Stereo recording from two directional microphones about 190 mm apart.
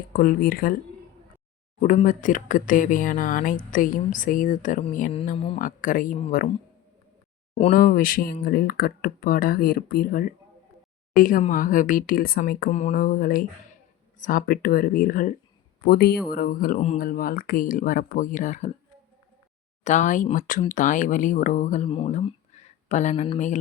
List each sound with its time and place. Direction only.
0.1 s speech: 50° left (ahead or behind)
1.8 s speech: 45° left (ahead or behind)
7.7 s speech: 45° left (ahead or behind)
19.8 s speech: 40° left (ahead or behind)
21.8 s speech: 25° left (ahead or behind)
22.1 s a sound: 35° left (ahead or behind)